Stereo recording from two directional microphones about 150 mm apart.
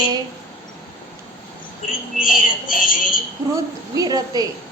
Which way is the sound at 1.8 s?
65° left (ahead or behind).